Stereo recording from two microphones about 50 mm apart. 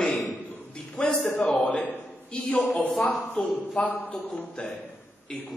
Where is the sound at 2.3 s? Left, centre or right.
Centre.